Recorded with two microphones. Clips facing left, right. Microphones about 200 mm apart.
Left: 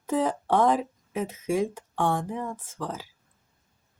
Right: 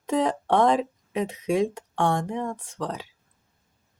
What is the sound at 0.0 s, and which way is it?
Speech, centre (ahead or behind).